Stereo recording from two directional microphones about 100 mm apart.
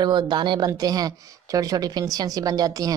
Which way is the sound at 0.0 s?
45° right (ahead or behind).